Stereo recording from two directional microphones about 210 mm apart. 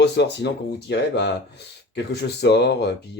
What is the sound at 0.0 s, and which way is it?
Speech, 55° left (ahead or behind).